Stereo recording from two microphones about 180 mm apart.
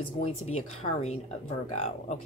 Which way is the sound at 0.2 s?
35° left (ahead or behind).